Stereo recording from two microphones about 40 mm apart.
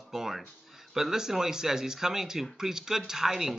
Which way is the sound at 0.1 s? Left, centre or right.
Centre.